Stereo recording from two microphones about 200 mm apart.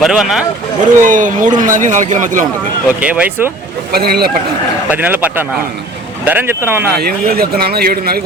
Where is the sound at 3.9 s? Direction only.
50° right (ahead or behind).